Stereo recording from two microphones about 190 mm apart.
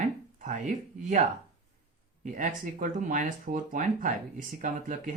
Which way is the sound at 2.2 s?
45° right (ahead or behind).